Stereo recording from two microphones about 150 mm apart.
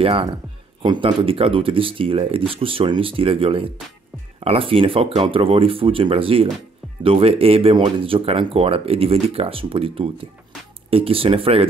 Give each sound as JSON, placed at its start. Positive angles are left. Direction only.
{"t": 0.0, "sound": "speech", "side_deg": -35}